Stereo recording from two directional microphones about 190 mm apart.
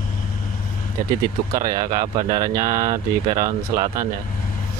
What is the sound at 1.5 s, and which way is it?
Speech, 20° right (ahead or behind).